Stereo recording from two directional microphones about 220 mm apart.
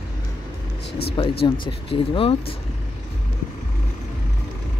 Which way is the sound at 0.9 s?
45° left (ahead or behind).